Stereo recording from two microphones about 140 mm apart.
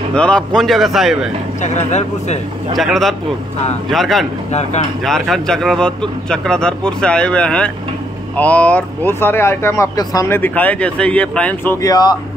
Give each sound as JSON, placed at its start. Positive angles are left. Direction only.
{"t": 0.1, "sound": "a man's voice", "side_deg": 5}
{"t": 1.6, "sound": "speech", "side_deg": 55}
{"t": 2.7, "sound": "a man's voice", "side_deg": 0}
{"t": 4.5, "sound": "speech", "side_deg": 55}
{"t": 5.0, "sound": "a man's voice", "side_deg": 0}